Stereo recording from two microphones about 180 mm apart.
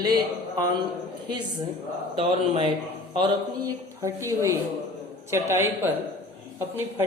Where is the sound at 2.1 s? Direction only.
30° right (ahead or behind).